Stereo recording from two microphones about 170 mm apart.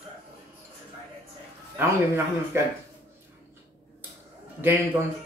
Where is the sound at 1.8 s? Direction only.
15° right (ahead or behind).